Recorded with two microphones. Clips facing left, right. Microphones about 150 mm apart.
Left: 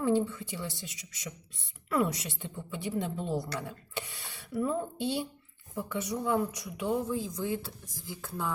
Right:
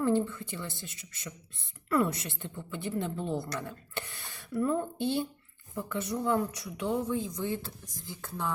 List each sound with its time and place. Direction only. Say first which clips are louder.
0.0 s a woman's voice: even; 10° left (ahead or behind)
0.9 s a man's voice: left 1 dB; 55° right (ahead or behind)
1.9 s a woman's voice: right 1 dB; 10° left (ahead or behind)
4.4 s a woman's voice: right 2 dB; 10° left (ahead or behind)